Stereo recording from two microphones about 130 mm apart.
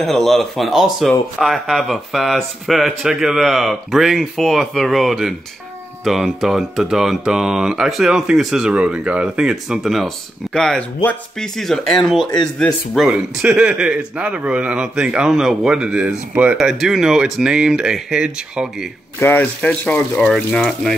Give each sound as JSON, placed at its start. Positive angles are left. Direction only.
{"t": 0.0, "sound": "speech", "side_deg": 5}
{"t": 19.1, "sound": "speech", "side_deg": 15}